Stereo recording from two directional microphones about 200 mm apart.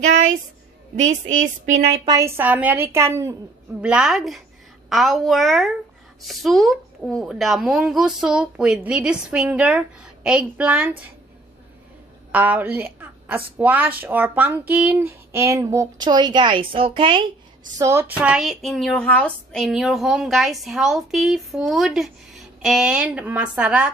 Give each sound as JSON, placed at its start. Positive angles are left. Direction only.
{"t": 1.2, "sound": "speech", "side_deg": -35}
{"t": 2.0, "sound": "a woman's voice", "side_deg": -15}
{"t": 12.3, "sound": "a woman's voice", "side_deg": -10}
{"t": 17.7, "sound": "a woman's voice", "side_deg": -15}